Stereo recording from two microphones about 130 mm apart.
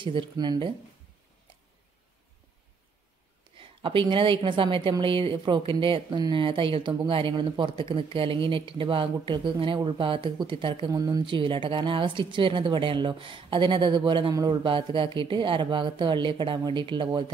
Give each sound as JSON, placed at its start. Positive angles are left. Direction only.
{"t": 0.0, "sound": "speech", "side_deg": -40}
{"t": 3.5, "sound": "a woman's voice", "side_deg": -40}
{"t": 10.9, "sound": "speech", "side_deg": -30}